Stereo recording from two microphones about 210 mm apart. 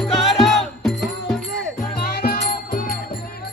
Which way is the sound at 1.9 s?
45° left (ahead or behind).